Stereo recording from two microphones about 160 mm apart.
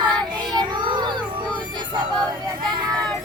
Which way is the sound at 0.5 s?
30° right (ahead or behind).